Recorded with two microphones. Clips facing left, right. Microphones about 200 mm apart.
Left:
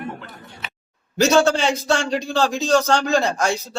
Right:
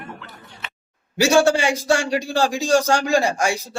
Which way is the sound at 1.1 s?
10° right (ahead or behind).